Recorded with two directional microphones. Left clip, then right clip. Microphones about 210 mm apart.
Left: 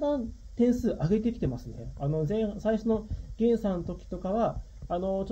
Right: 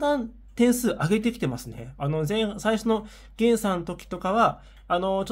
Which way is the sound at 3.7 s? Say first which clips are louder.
Right 5 dB; 25° right (ahead or behind).